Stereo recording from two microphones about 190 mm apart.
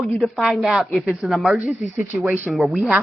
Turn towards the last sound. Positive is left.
turn(degrees=-5)  # may be behind; listen again after turning